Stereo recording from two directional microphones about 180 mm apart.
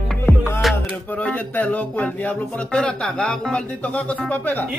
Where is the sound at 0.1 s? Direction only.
10° left (ahead or behind).